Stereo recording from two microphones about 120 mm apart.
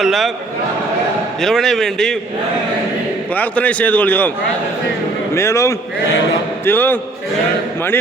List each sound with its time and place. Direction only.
0.0 s a man's voice: centre (ahead or behind)
1.4 s a man's voice: 5° left (ahead or behind)
3.3 s a man's voice: 15° left (ahead or behind)
5.3 s a man's voice: 25° left (ahead or behind)